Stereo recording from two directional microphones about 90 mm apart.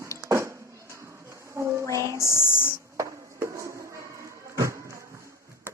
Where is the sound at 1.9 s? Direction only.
45° right (ahead or behind).